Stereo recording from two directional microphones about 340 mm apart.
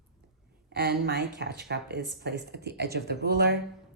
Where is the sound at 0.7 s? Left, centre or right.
Right.